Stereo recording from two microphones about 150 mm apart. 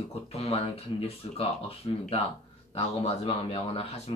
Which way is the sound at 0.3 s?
40° left (ahead or behind).